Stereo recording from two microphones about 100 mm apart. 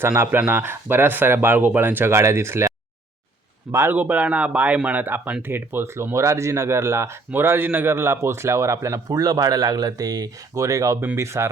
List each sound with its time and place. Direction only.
0.0 s a man's voice: 20° right (ahead or behind)
11.0 s speech: 15° right (ahead or behind)